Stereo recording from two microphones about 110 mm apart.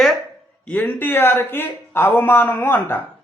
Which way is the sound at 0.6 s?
20° left (ahead or behind).